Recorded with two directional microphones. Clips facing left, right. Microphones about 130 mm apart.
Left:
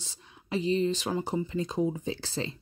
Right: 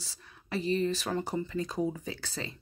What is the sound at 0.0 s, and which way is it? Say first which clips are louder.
Speech: left 1 dB; 20° left (ahead or behind).